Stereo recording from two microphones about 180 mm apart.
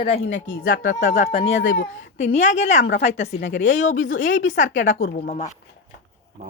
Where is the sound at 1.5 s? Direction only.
90° left.